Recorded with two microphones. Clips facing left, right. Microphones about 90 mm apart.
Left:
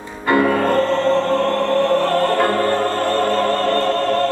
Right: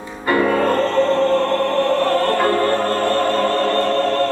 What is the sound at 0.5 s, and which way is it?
Music, 20° left (ahead or behind).